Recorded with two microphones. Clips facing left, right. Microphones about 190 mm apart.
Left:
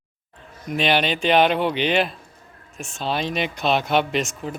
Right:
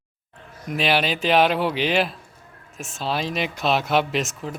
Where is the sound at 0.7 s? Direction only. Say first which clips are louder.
Left 1 dB; 5° right (ahead or behind).